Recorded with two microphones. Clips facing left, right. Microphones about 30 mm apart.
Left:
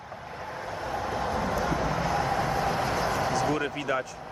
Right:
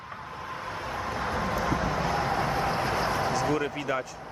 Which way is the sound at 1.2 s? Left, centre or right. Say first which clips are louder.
Right 1 dB; right.